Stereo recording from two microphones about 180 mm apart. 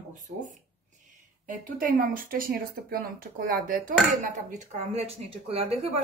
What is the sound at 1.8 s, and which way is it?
A woman's voice, 50° right (ahead or behind).